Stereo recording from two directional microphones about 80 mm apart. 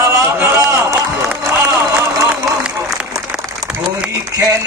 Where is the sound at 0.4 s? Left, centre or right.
Right.